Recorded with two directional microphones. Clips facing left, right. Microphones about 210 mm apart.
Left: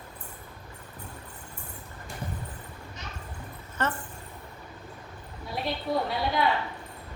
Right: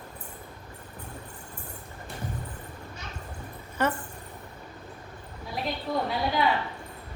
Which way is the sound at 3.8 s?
10° right (ahead or behind).